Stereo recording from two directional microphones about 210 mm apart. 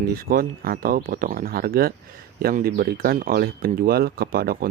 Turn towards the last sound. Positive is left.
turn(degrees=-45)  # may be behind; listen again after turning